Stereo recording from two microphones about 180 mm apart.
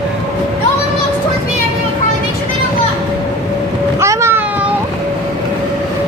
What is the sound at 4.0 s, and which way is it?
Vehicle, 15° right (ahead or behind).